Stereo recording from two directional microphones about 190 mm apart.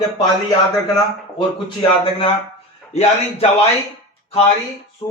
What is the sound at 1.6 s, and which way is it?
Speech, 25° left (ahead or behind).